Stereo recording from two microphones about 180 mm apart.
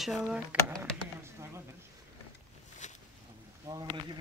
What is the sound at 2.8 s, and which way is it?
Boat, 40° left (ahead or behind).